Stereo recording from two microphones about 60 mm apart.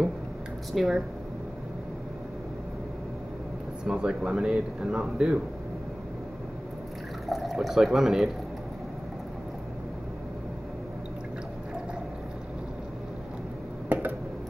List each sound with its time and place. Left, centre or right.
0.7 s speech: centre
3.8 s speech: centre
7.2 s speech: centre
13.8 s a sound: right